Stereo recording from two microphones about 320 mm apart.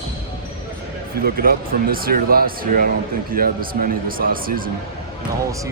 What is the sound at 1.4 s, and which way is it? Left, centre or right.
Speech, right.